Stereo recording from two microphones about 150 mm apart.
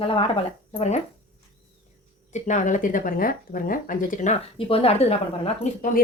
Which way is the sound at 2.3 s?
55° left (ahead or behind).